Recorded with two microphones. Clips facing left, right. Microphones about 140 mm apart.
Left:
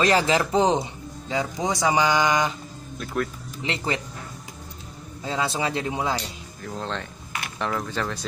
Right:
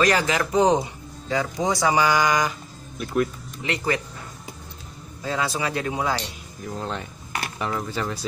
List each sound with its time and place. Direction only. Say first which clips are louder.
0.0 s speech: left 1 dB; 30° left (ahead or behind)
3.6 s speech: right 2 dB; 25° left (ahead or behind)
5.2 s speech: even; 25° left (ahead or behind)
6.6 s speech: right 1 dB; 5° right (ahead or behind)